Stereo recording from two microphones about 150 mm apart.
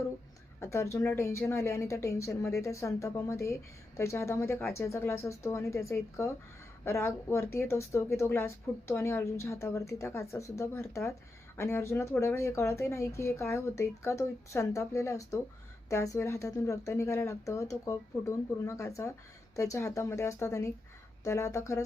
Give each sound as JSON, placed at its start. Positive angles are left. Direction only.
{"t": 0.6, "sound": "a woman's voice", "side_deg": 20}